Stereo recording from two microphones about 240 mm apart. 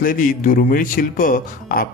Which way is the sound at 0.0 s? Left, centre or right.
Left.